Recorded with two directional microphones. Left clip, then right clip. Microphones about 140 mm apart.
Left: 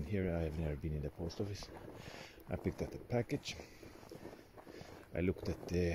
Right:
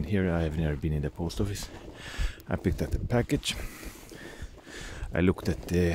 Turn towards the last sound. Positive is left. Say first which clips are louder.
# right 9 dB
turn(degrees=-45)  # may be behind; listen again after turning